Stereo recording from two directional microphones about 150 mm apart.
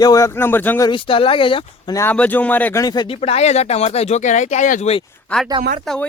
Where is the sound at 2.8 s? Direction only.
30° left (ahead or behind).